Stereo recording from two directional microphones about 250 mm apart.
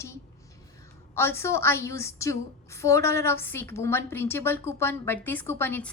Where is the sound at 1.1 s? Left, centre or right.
Centre.